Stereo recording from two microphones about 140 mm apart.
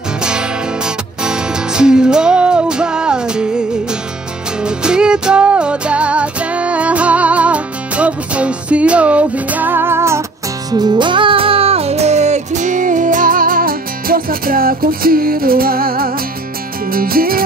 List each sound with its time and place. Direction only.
0.2 s music: 5° right (ahead or behind)
4.6 s music: 5° right (ahead or behind)
10.7 s music: 30° right (ahead or behind); by 17.4 s 90° right